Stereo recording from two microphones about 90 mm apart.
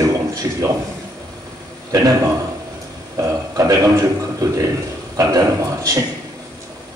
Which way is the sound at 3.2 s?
40° right (ahead or behind).